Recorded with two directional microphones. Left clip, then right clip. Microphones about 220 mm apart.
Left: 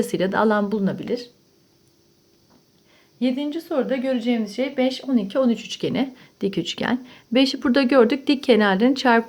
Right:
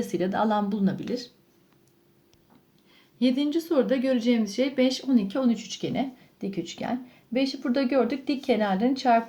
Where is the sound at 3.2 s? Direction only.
Centre (ahead or behind).